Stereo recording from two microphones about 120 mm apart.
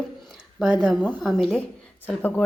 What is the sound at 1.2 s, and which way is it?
A woman's voice, centre (ahead or behind).